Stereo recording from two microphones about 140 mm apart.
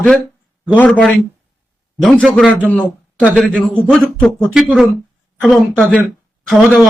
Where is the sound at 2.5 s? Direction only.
10° left (ahead or behind).